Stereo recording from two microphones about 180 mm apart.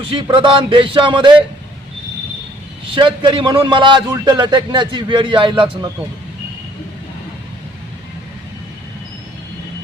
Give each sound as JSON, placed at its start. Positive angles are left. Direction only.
{"t": 0.1, "sound": "a man's voice", "side_deg": -30}
{"t": 2.9, "sound": "a man's voice", "side_deg": -30}